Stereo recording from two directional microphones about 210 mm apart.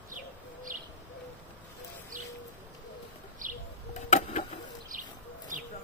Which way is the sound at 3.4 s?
40° right (ahead or behind).